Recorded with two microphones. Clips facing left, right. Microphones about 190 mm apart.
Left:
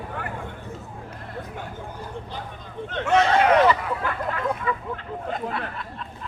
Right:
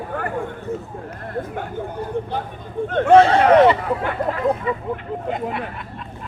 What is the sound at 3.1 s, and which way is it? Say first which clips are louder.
Speech: right 6 dB; 30° right (ahead or behind).